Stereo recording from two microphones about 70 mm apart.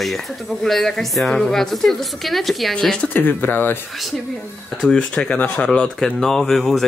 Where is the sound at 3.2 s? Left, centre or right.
Left.